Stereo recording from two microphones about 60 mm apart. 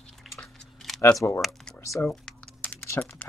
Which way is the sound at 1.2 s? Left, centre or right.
Left.